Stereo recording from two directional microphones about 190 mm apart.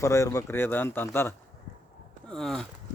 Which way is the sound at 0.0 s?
15° left (ahead or behind).